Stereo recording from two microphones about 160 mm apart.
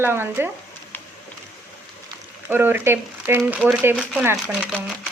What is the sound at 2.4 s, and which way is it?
Speech, 10° right (ahead or behind).